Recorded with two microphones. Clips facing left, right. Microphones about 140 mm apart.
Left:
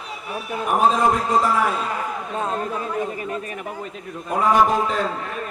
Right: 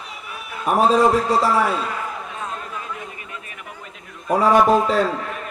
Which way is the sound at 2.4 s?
35° left (ahead or behind).